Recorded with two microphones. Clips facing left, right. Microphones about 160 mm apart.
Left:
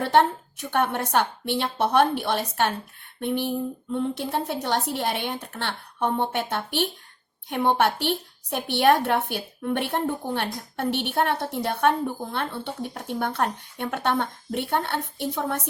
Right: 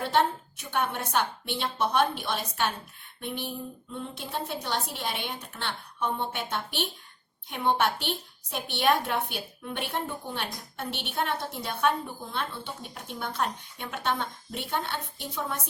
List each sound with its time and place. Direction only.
0.0 s a woman's voice: 65° left (ahead or behind)